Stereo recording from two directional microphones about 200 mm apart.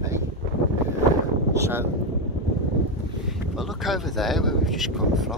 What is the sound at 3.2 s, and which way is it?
Speech, centre (ahead or behind).